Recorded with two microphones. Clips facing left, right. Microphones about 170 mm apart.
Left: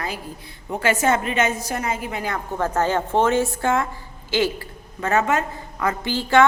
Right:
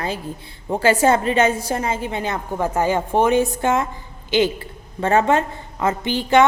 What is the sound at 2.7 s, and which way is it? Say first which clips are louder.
A woman's voice: right 2 dB; 10° right (ahead or behind).